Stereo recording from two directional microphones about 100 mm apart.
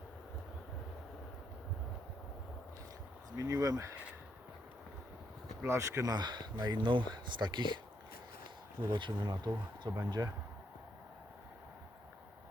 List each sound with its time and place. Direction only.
3.3 s speech: 35° right (ahead or behind)
5.6 s speech: 25° right (ahead or behind); by 7.8 s 50° right (ahead or behind)
8.9 s speech: 50° right (ahead or behind)
10.2 s speech: 35° right (ahead or behind)